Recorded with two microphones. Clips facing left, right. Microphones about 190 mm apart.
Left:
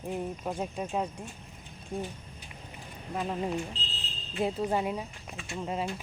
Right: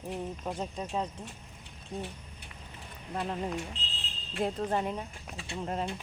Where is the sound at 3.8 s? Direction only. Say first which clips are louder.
Left 2 dB; 35° left (ahead or behind).